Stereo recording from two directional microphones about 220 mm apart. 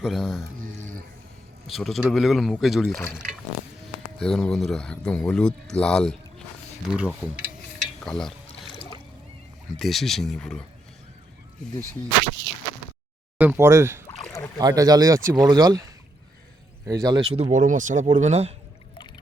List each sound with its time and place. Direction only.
0.0 s speech: centre (ahead or behind)
0.6 s a sound: 40° right (ahead or behind)
1.6 s speech: centre (ahead or behind)
2.9 s speech: 10° left (ahead or behind)
4.2 s speech: 5° left (ahead or behind)
8.6 s boat: 20° left (ahead or behind)
9.7 s speech: centre (ahead or behind)
13.4 s speech: 10° right (ahead or behind)
16.8 s speech: 15° right (ahead or behind)